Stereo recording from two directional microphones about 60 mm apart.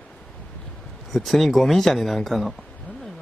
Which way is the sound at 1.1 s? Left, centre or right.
Centre.